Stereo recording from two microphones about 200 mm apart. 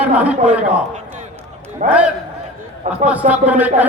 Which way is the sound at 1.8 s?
5° right (ahead or behind).